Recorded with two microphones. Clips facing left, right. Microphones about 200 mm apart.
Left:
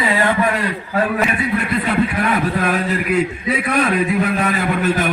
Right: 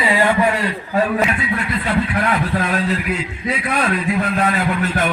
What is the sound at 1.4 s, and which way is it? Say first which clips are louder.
A man's voice: left 3 dB; 60° left (ahead or behind).